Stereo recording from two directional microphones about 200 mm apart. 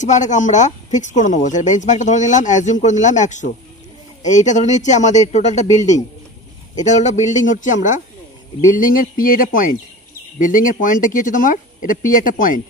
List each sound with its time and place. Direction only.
0.0 s speech: 35° left (ahead or behind)